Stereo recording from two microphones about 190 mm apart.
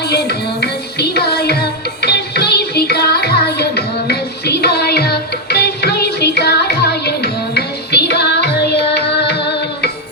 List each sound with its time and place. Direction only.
0.0 s music: 60° left (ahead or behind)